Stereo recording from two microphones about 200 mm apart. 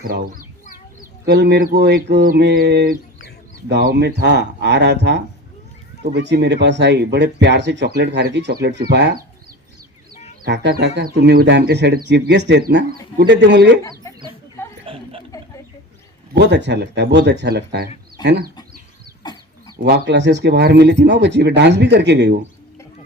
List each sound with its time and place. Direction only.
0.0 s speech: 45° right (ahead or behind)
10.4 s speech: 55° right (ahead or behind)
14.9 s chuckle: 25° right (ahead or behind)
16.3 s speech: 60° right (ahead or behind)
19.2 s chicken: 20° left (ahead or behind)
19.8 s speech: 60° right (ahead or behind)